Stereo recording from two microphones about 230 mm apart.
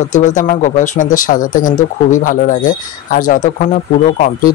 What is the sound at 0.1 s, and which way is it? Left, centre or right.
Speech, left.